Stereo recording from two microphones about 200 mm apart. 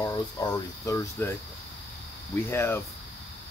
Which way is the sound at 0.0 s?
20° left (ahead or behind).